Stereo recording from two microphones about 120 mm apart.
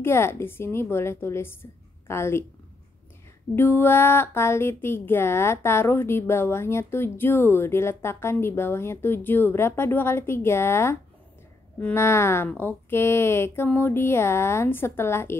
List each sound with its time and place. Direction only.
0.0 s a woman's voice: 20° left (ahead or behind)
3.5 s a woman's voice: 20° left (ahead or behind)